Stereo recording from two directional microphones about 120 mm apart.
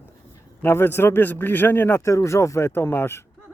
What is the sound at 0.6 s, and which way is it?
A man's voice, 20° left (ahead or behind).